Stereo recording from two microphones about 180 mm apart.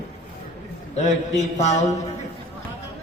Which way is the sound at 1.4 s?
40° left (ahead or behind).